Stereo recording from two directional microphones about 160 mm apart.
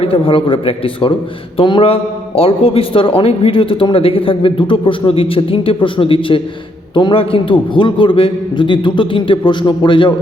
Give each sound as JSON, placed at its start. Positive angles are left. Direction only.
{"t": 0.0, "sound": "a man's voice", "side_deg": 35}